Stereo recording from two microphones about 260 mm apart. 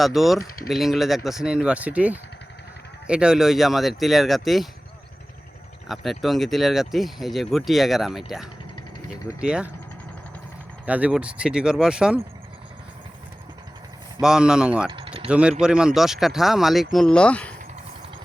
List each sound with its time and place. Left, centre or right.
0.0 s speech: centre
5.9 s speech: centre
10.8 s speech: centre
14.2 s speech: centre
14.8 s mechanisms: centre
15.3 s speech: centre